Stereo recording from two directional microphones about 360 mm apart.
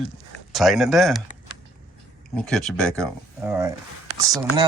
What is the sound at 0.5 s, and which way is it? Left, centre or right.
Speech, centre.